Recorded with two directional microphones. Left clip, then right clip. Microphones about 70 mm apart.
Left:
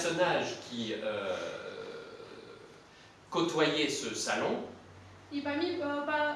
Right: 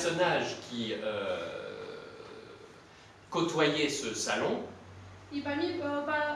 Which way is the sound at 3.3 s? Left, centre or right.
Centre.